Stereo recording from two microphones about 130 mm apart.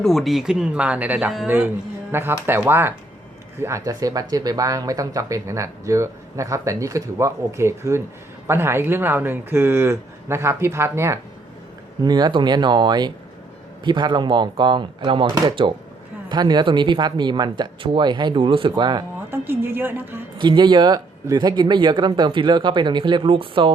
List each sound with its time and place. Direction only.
0.0 s speech: centre (ahead or behind); by 11.2 s 20° right (ahead or behind)
12.0 s speech: 30° right (ahead or behind)
19.3 s a woman's voice: 15° right (ahead or behind)
20.4 s speech: 35° right (ahead or behind)